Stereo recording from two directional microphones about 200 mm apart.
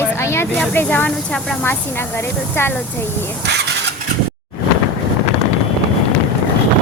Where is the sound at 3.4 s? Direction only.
60° right (ahead or behind).